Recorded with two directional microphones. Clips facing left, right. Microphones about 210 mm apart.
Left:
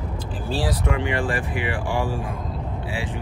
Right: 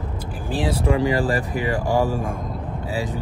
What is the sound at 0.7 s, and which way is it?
Speech, 30° right (ahead or behind).